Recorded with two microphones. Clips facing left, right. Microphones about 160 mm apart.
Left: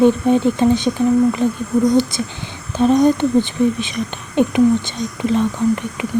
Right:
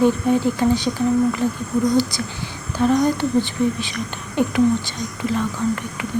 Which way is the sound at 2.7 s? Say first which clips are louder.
Left 4 dB; 20° left (ahead or behind).